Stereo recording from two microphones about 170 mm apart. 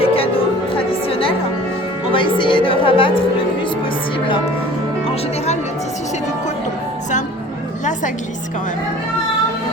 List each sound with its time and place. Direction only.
0.0 s music: 35° left (ahead or behind)
2.1 s a woman's voice: 30° left (ahead or behind)